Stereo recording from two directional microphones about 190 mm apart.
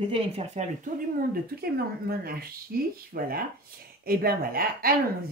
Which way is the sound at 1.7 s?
55° right (ahead or behind).